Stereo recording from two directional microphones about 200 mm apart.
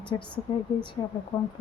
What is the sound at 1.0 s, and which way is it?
Speech, 25° left (ahead or behind).